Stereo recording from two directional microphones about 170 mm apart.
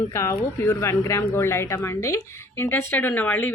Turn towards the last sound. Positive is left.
turn(degrees=10)  # may be behind; listen again after turning